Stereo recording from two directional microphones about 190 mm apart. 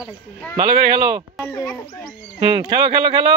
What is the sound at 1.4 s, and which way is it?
Speech, 10° left (ahead or behind).